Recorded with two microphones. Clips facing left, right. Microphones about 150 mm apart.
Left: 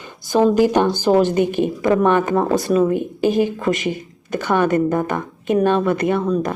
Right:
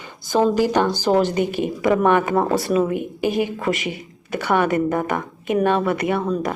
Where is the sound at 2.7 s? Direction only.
15° right (ahead or behind).